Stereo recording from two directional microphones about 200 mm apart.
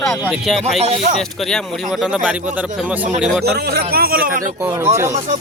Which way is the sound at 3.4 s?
55° right (ahead or behind).